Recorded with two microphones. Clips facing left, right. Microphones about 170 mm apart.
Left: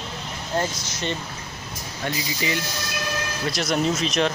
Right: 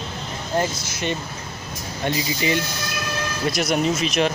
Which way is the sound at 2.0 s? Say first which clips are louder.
Right 4 dB; 20° right (ahead or behind).